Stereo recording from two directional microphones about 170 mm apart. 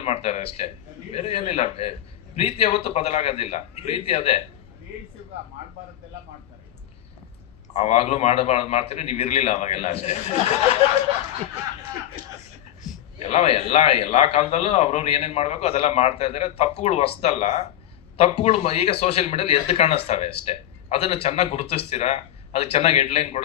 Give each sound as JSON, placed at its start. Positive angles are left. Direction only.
{"t": 0.0, "sound": "a man's voice", "side_deg": 35}
{"t": 7.7, "sound": "a man's voice", "side_deg": 35}
{"t": 12.9, "sound": "a sound", "side_deg": -5}
{"t": 13.2, "sound": "a man's voice", "side_deg": 35}